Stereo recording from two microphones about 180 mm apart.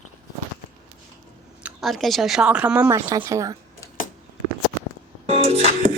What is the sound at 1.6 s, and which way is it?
Speech, centre (ahead or behind).